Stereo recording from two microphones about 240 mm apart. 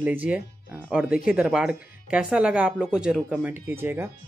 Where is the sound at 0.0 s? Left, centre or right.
Centre.